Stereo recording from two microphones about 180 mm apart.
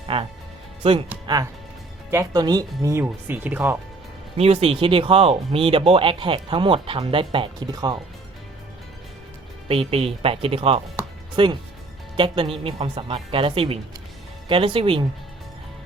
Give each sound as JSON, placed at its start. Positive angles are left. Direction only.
{"t": 0.1, "sound": "speech", "side_deg": -30}
{"t": 2.0, "sound": "speech", "side_deg": -15}
{"t": 4.4, "sound": "speech", "side_deg": -35}
{"t": 9.6, "sound": "speech", "side_deg": -35}